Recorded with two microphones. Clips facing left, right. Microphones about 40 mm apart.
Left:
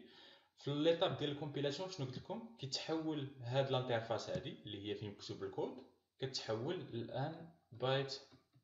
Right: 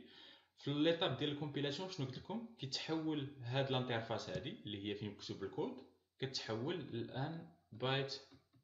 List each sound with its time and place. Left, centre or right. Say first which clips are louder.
0.7 s speech: left 1 dB; centre